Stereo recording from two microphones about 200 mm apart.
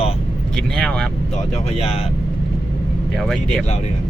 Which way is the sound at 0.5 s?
5° left (ahead or behind).